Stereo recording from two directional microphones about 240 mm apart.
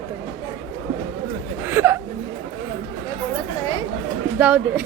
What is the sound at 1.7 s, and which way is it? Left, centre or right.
Speech, centre.